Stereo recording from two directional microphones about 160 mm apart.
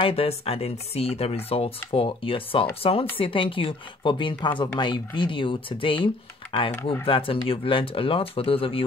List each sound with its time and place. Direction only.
0.0 s speech: 35° left (ahead or behind)